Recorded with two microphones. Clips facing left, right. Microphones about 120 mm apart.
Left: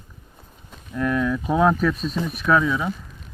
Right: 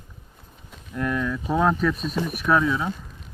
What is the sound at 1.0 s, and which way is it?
Speech, 5° left (ahead or behind).